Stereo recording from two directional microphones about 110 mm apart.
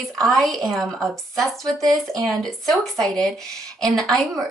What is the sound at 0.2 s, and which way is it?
Speech, 5° left (ahead or behind).